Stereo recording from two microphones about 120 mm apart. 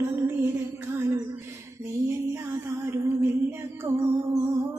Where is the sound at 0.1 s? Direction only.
20° right (ahead or behind).